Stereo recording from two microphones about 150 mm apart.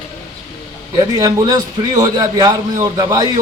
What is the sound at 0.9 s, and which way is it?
A man's voice, 25° right (ahead or behind).